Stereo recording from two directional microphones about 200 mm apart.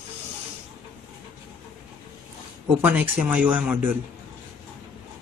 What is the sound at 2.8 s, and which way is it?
Speech, 10° right (ahead or behind).